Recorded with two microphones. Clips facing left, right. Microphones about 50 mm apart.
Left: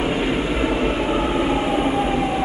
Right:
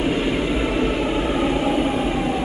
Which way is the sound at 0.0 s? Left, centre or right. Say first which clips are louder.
Even; centre.